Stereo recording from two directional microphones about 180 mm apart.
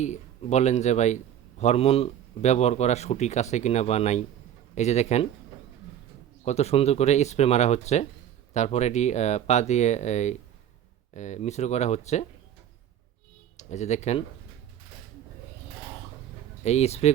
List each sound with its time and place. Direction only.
0.0 s a man's voice: 40° left (ahead or behind)
6.4 s a man's voice: 35° left (ahead or behind)
13.6 s a man's voice: 40° left (ahead or behind)
16.6 s a man's voice: 35° left (ahead or behind)